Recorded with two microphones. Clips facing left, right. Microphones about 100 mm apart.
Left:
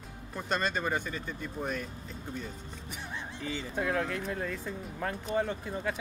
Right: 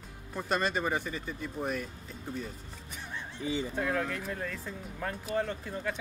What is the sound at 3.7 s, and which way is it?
Speech, 5° left (ahead or behind).